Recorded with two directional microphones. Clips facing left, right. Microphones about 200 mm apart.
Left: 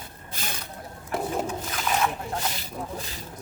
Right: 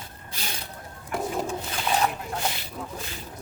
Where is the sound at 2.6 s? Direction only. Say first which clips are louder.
Left 2 dB; 35° left (ahead or behind).